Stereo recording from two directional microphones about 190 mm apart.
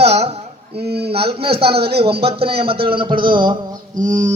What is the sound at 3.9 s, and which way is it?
Mantra, 40° right (ahead or behind).